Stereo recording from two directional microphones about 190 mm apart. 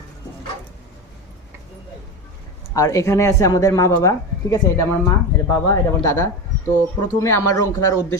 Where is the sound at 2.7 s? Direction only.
15° left (ahead or behind).